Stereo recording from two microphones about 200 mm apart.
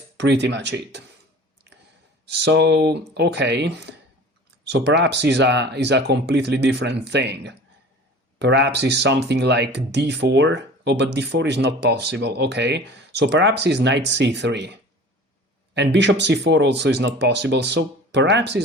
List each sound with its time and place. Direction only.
0.2 s speech: 60° right (ahead or behind)
2.2 s speech: 55° right (ahead or behind)